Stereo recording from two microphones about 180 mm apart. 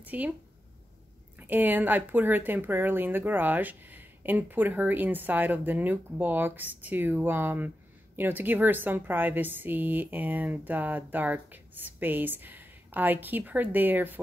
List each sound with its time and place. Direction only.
0.0 s speech: 10° right (ahead or behind)
1.4 s speech: 10° right (ahead or behind)